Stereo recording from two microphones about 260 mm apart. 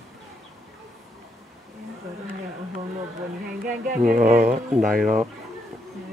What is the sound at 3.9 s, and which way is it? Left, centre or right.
Speech, right.